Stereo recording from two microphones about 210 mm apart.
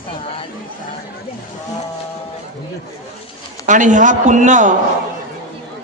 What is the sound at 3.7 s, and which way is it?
A man's voice, 35° right (ahead or behind).